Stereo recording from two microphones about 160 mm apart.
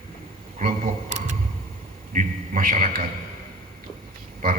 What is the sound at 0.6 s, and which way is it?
A man's voice, 50° right (ahead or behind).